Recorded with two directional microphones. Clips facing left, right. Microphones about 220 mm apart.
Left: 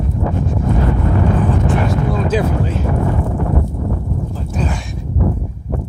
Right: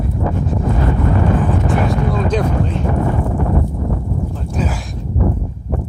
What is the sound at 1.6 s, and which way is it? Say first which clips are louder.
Vehicle: even; 5° left (ahead or behind).